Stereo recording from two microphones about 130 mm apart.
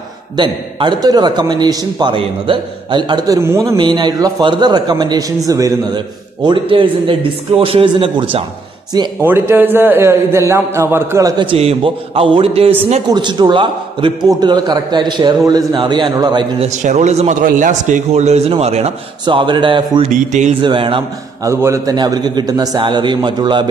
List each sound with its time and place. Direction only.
0.4 s a man's voice: 35° right (ahead or behind)
3.3 s a man's voice: 20° right (ahead or behind)
3.7 s a man's voice: 35° right (ahead or behind)
6.4 s a man's voice: 40° right (ahead or behind)
9.2 s a man's voice: 15° right (ahead or behind)
11.3 s a man's voice: 45° right (ahead or behind)
13.1 s a man's voice: 35° right (ahead or behind)
16.6 s a man's voice: 60° right (ahead or behind)
19.2 s a man's voice: 35° right (ahead or behind)
20.1 s speech: 65° right (ahead or behind)
20.6 s a man's voice: 40° right (ahead or behind)
21.5 s a man's voice: 20° right (ahead or behind)